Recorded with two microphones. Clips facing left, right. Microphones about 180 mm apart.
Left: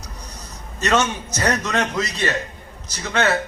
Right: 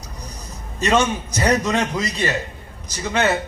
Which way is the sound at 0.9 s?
10° right (ahead or behind).